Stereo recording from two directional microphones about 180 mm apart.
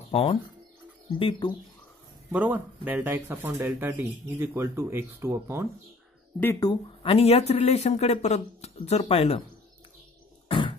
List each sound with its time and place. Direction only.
0.1 s speech: 30° left (ahead or behind)
2.3 s speech: 10° right (ahead or behind)
6.4 s speech: 15° left (ahead or behind)
6.7 s speech: 30° left (ahead or behind)
10.5 s a sound: 25° left (ahead or behind)